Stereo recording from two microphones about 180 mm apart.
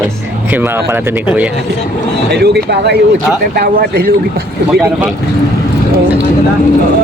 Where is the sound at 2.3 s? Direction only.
65° right (ahead or behind).